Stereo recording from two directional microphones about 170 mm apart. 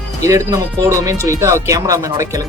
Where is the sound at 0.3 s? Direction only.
20° right (ahead or behind).